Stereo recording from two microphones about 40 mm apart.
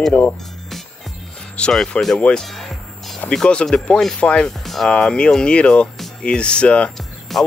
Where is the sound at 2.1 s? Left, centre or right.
Left.